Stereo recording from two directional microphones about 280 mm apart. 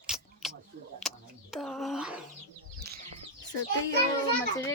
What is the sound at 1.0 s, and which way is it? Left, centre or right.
Speech, centre.